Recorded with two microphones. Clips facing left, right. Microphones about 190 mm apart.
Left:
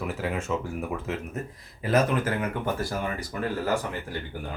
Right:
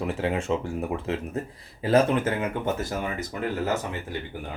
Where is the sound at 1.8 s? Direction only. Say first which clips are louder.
Right 3 dB; 30° right (ahead or behind).